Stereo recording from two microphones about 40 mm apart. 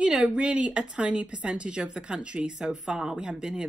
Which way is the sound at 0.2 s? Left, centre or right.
Right.